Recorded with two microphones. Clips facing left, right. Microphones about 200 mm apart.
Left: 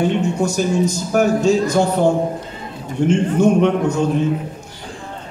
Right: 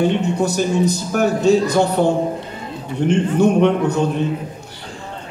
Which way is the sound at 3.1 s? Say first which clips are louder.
Even; 60° right (ahead or behind).